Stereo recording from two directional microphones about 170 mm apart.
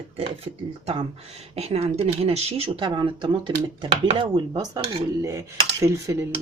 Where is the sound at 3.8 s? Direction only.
30° right (ahead or behind).